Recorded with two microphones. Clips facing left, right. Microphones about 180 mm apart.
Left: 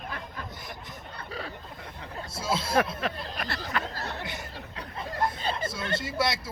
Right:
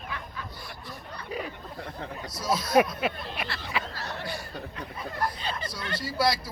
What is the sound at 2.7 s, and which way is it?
Speech, 10° right (ahead or behind).